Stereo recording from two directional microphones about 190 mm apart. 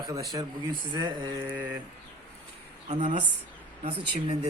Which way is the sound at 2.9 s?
40° right (ahead or behind).